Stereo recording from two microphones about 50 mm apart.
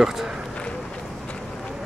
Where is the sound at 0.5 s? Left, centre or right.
Left.